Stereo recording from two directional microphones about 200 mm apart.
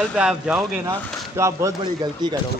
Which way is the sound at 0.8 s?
15° right (ahead or behind).